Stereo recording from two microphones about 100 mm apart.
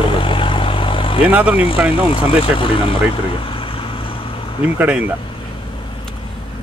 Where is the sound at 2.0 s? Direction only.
60° left (ahead or behind).